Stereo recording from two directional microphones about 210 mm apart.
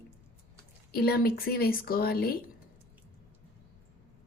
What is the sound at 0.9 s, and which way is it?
A woman's voice, 50° left (ahead or behind).